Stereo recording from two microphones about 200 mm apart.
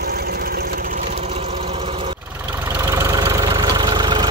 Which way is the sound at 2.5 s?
10° right (ahead or behind).